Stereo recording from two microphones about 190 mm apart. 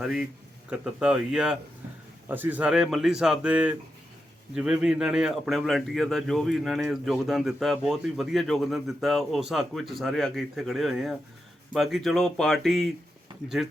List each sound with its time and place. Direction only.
0.0 s speech: 5° right (ahead or behind)